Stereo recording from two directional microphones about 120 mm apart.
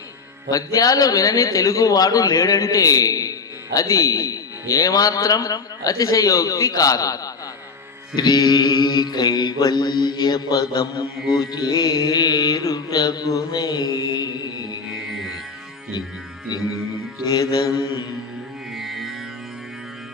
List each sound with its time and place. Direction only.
0.5 s speech: 30° left (ahead or behind)
8.1 s mantra: 35° left (ahead or behind)
14.9 s music: 5° right (ahead or behind)
17.2 s mantra: 30° left (ahead or behind)
18.7 s music: centre (ahead or behind)